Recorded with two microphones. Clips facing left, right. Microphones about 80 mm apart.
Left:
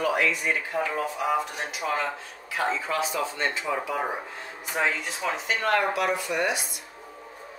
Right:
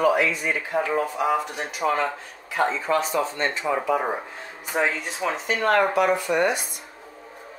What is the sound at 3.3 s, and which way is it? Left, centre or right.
Speech, right.